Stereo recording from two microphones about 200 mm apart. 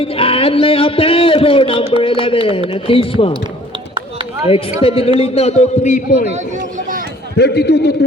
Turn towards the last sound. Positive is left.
turn(degrees=55)  # may be behind; listen again after turning